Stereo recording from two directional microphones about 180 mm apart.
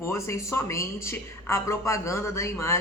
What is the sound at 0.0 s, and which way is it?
Speech, 15° left (ahead or behind).